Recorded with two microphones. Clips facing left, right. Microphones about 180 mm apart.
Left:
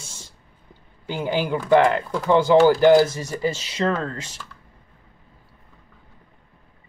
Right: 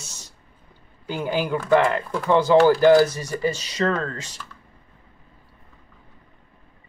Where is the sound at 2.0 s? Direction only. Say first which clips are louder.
Left 1 dB; centre (ahead or behind).